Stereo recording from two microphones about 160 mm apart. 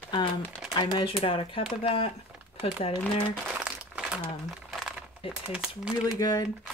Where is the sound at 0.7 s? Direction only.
30° left (ahead or behind).